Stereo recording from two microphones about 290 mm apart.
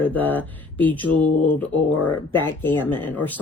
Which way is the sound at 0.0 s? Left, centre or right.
Centre.